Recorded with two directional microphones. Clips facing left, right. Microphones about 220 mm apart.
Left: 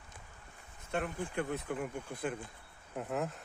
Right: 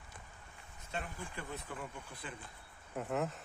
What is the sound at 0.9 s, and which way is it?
Speech, 60° left (ahead or behind).